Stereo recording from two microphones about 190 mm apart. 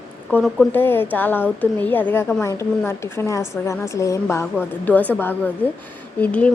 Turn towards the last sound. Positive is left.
turn(degrees=5)  # may be behind; listen again after turning